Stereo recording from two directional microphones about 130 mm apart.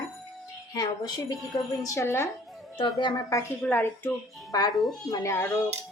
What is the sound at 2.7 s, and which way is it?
Speech, 35° left (ahead or behind).